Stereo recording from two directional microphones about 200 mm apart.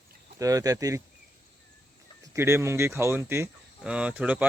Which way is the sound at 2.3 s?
15° right (ahead or behind).